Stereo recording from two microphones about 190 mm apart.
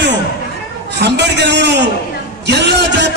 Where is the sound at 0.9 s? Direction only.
65° right (ahead or behind).